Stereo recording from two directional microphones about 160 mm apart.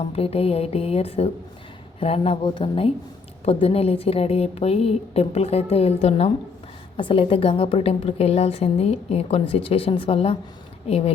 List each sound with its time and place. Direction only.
0.0 s a woman's voice: 40° left (ahead or behind)